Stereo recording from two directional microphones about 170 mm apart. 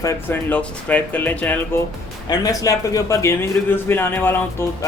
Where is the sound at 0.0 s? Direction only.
20° left (ahead or behind).